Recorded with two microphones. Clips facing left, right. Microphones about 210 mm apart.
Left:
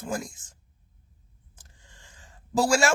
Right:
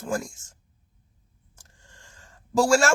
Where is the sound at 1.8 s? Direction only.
Centre (ahead or behind).